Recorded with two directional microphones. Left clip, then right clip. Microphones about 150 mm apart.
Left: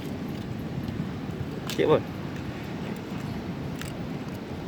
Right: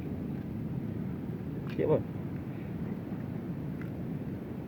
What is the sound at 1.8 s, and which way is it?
Speech, 20° left (ahead or behind).